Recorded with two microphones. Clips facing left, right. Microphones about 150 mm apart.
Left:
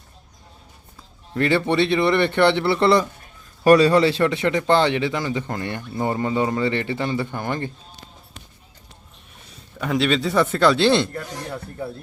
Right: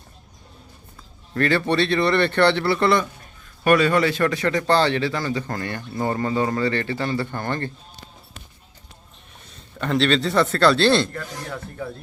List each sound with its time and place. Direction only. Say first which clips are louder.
1.3 s speech: left 1 dB; 20° left (ahead or behind)
9.3 s a man's voice: even; centre (ahead or behind)